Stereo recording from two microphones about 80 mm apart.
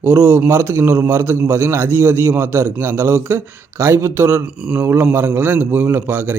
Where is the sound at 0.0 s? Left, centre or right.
Centre.